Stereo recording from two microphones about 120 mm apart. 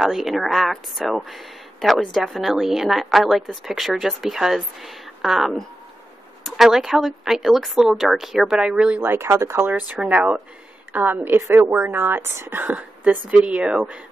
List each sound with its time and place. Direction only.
0.0 s a woman's voice: 5° right (ahead or behind)